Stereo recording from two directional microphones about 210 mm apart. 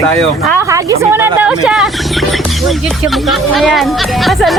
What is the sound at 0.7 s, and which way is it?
A woman's voice, 10° right (ahead or behind).